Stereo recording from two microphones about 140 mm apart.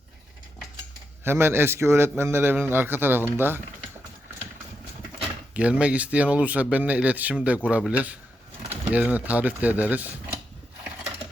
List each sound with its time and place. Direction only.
1.2 s a man's voice: 15° right (ahead or behind)
5.5 s a man's voice: 10° right (ahead or behind)